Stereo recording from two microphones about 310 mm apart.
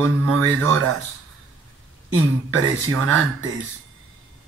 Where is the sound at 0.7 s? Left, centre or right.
Right.